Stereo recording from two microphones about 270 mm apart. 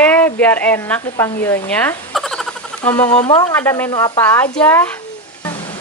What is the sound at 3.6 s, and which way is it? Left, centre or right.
Speech, centre.